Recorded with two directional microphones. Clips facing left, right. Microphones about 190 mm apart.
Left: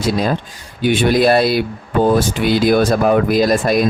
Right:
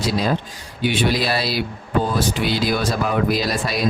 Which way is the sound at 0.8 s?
50° left (ahead or behind).